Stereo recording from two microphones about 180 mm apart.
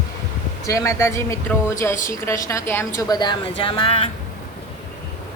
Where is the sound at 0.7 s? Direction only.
15° left (ahead or behind).